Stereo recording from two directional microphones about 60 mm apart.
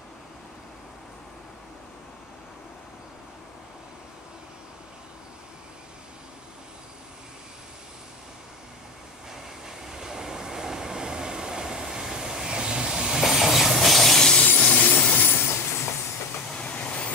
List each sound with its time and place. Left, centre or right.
9.3 s train: centre
14.4 s train: left
16.5 s train: left